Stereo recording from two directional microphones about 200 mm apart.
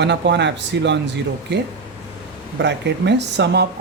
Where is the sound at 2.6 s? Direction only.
60° right (ahead or behind).